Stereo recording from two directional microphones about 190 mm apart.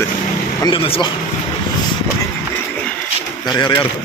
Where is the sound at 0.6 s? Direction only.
30° left (ahead or behind).